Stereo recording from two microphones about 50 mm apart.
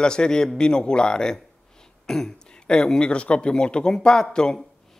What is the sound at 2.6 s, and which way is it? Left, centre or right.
Speech, centre.